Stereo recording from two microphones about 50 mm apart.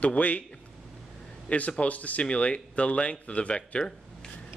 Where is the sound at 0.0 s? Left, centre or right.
Left.